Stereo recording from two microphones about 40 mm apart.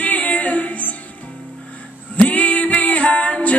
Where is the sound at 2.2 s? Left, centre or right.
Left.